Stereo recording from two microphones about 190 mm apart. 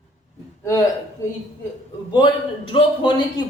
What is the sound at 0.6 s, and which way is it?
Speech, 15° left (ahead or behind).